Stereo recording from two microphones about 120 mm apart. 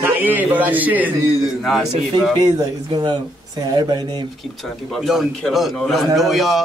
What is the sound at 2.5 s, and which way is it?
Speech, 30° right (ahead or behind).